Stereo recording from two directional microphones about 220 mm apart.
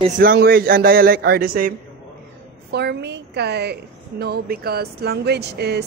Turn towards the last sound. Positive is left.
turn(degrees=-50)  # may be behind; listen again after turning